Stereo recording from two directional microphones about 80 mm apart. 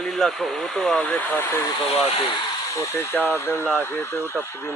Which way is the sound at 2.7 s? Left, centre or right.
Left.